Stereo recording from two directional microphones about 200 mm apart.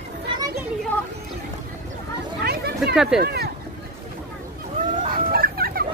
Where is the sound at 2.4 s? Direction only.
50° right (ahead or behind).